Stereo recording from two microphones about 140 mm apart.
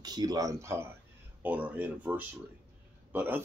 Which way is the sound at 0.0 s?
30° right (ahead or behind).